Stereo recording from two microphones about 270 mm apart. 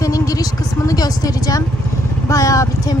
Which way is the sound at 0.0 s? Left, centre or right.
Centre.